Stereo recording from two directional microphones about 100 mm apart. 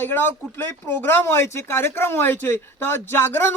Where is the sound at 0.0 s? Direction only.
20° left (ahead or behind).